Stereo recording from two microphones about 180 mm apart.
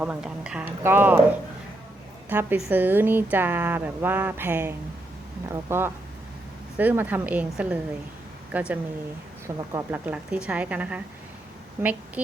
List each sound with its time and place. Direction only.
0.0 s speech: 5° right (ahead or behind)
2.3 s speech: 10° right (ahead or behind)